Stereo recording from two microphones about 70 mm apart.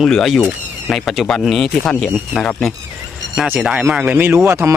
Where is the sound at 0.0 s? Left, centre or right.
Centre.